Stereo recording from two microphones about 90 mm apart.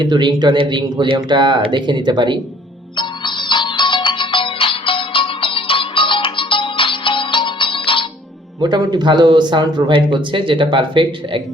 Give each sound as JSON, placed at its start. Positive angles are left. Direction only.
{"t": 0.0, "sound": "speech", "side_deg": -55}
{"t": 2.9, "sound": "music", "side_deg": 60}
{"t": 8.6, "sound": "speech", "side_deg": -55}